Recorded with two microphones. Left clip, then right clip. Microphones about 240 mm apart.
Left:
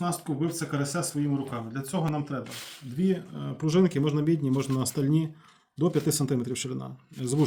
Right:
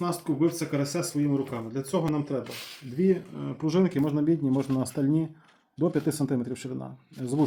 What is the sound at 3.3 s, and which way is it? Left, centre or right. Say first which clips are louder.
Speech: even; left.